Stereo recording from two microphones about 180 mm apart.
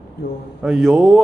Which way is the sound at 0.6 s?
Centre (ahead or behind).